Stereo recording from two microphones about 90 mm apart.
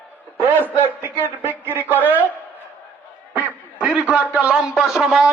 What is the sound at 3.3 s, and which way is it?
A man's voice, 15° right (ahead or behind).